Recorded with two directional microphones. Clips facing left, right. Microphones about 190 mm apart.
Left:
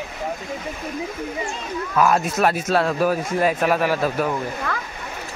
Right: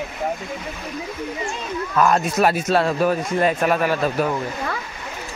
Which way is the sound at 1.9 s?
5° left (ahead or behind).